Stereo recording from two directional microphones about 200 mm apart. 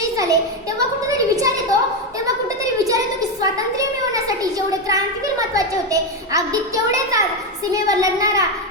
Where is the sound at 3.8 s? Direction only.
15° right (ahead or behind).